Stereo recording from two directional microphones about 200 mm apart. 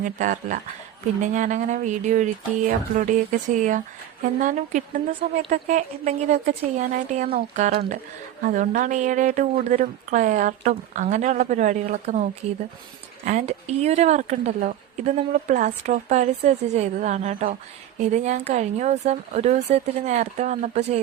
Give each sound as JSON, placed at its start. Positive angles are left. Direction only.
{"t": 0.0, "sound": "speech", "side_deg": -40}